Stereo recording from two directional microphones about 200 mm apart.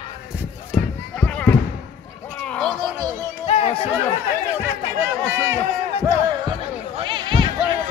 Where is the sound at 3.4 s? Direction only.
30° left (ahead or behind).